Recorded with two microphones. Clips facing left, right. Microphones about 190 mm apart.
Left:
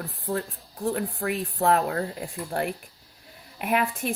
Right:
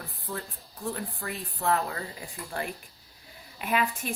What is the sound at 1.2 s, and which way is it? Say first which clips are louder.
A woman's voice: left 6 dB; 55° left (ahead or behind).